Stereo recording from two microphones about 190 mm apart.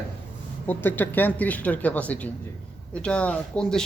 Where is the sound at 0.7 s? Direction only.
10° left (ahead or behind).